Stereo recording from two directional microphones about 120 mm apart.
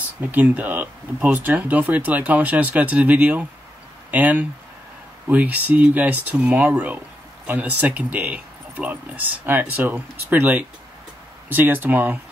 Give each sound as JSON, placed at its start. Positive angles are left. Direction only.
{"t": 0.0, "sound": "speech", "side_deg": -15}